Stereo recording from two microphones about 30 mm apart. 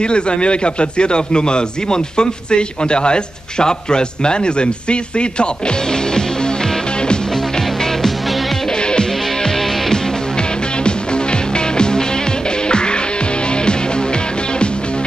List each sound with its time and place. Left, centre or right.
0.0 s a man's voice: left
8.8 s music: left
11.5 s music: left